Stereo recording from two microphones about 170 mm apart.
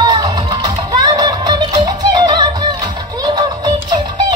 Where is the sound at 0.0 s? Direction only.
25° right (ahead or behind).